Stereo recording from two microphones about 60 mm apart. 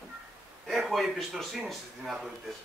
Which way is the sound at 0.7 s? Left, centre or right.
Centre.